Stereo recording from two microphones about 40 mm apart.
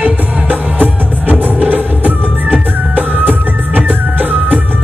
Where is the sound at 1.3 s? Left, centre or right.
Right.